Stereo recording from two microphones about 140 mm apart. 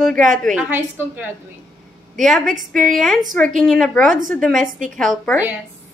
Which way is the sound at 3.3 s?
Centre (ahead or behind).